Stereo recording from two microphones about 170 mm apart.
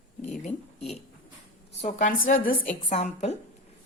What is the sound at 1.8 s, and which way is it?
Speech, 50° left (ahead or behind).